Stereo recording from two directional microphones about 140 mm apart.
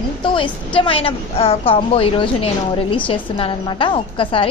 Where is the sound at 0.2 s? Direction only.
35° left (ahead or behind).